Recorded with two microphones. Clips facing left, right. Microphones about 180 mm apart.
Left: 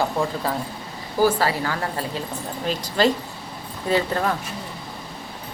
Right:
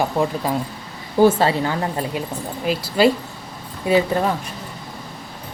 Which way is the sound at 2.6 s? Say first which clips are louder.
Right 4 dB; 10° right (ahead or behind).